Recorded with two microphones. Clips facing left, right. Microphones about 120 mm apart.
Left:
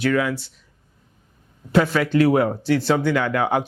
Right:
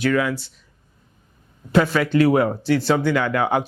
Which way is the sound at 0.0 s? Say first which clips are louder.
Even; 10° right (ahead or behind).